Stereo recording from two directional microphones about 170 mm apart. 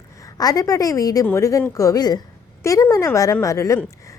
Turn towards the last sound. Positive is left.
turn(degrees=20)  # may be behind; listen again after turning